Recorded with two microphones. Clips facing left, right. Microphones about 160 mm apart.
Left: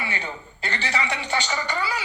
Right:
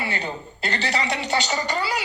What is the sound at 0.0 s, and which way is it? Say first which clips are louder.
A woman's voice: right 3 dB; 35° right (ahead or behind).